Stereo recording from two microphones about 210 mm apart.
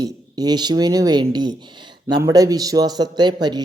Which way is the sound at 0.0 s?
20° right (ahead or behind).